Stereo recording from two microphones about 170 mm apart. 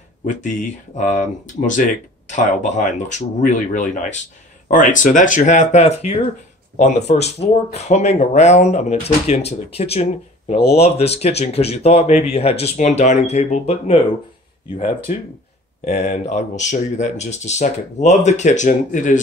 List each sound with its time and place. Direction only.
0.2 s speech: 45° left (ahead or behind)
15.8 s speech: 40° left (ahead or behind)